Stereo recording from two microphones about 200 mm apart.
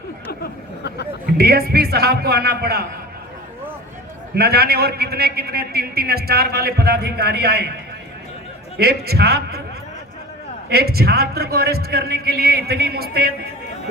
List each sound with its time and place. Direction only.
0.3 s a sound: 55° left (ahead or behind)
1.4 s a man's voice: 50° right (ahead or behind)
4.4 s a man's voice: 50° right (ahead or behind)
8.8 s a man's voice: 50° right (ahead or behind)
10.7 s a man's voice: 50° right (ahead or behind)